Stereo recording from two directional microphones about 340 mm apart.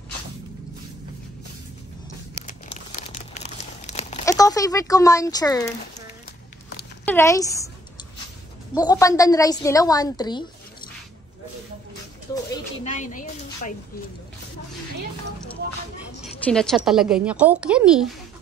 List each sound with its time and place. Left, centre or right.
2.4 s crumpling: left
7.1 s a woman's voice: centre
8.7 s a woman's voice: centre
12.8 s a woman's voice: left
16.4 s a woman's voice: centre